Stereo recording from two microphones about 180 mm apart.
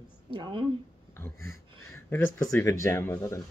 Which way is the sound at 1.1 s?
10° left (ahead or behind).